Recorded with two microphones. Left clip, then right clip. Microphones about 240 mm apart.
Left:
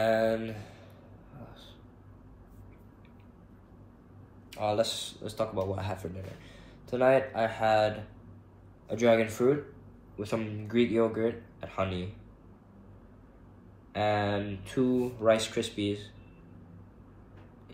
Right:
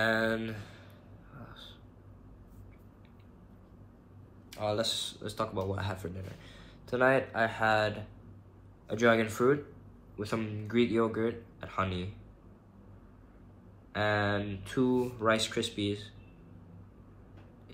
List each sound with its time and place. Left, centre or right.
0.0 s speech: centre
1.4 s a sound: centre
4.5 s speech: centre
13.9 s speech: centre